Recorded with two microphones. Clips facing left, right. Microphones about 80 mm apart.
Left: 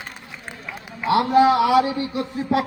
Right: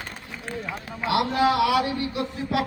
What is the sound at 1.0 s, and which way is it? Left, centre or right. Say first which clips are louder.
A man's voice: left 6 dB; left.